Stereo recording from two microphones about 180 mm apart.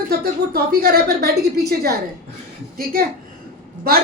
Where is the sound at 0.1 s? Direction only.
60° right (ahead or behind).